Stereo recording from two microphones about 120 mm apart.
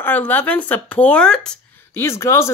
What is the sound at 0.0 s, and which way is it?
Speech, 15° left (ahead or behind).